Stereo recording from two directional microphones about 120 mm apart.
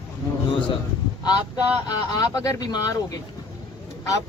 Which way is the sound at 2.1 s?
30° left (ahead or behind).